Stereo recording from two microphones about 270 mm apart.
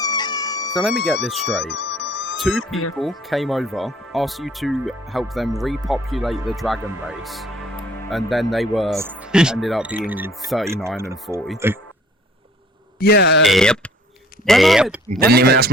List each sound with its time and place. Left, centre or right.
0.0 s music: centre
0.8 s speech: centre
1.5 s music: left
3.0 s speech: centre
10.8 s speech: centre
13.0 s speech: left
13.4 s speech: centre
15.2 s speech: right